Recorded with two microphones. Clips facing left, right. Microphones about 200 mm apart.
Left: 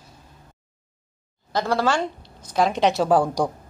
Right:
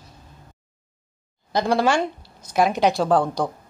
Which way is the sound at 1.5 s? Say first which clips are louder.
Right 2 dB; 15° right (ahead or behind).